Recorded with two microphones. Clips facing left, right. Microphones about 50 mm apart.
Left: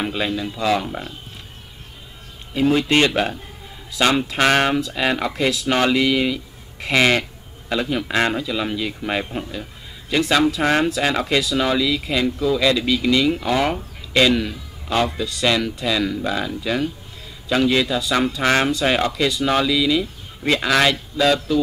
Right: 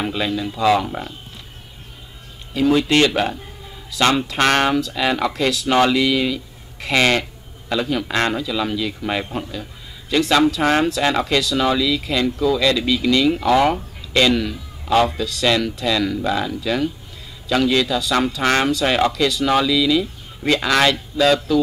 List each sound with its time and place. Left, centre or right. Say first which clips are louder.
0.0 s speech: right 1 dB; centre
4.0 s speech: right 1 dB; centre
5.7 s speech: right 3 dB; centre
5.9 s speech: even; centre
9.0 s speech: right 1 dB; centre
9.5 s a sound: even; left
10.1 s speech: right 2 dB; centre